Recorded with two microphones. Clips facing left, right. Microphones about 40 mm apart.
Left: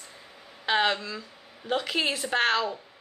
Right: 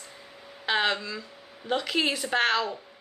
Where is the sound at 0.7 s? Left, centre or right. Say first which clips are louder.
Left 1 dB; centre.